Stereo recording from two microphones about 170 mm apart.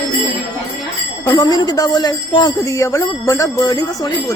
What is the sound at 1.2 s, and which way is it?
A man's voice, 20° left (ahead or behind).